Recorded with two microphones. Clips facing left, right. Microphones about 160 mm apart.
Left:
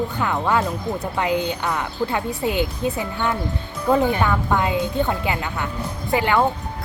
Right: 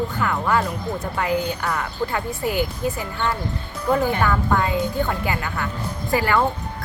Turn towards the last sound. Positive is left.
turn(degrees=20)  # may be behind; listen again after turning